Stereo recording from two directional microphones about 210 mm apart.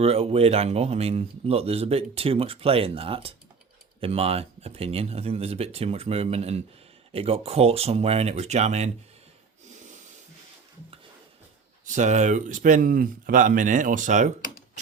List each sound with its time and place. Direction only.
0.0 s speech: 30° right (ahead or behind)
11.9 s speech: 35° right (ahead or behind)